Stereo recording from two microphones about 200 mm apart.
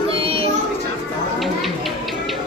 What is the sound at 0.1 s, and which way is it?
Children playing, 30° right (ahead or behind).